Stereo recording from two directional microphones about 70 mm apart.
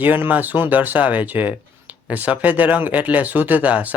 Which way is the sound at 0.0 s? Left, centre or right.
Right.